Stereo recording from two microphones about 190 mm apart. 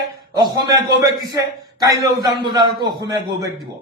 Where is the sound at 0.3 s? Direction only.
20° right (ahead or behind).